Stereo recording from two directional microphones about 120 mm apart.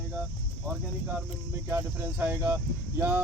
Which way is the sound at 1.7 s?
20° right (ahead or behind).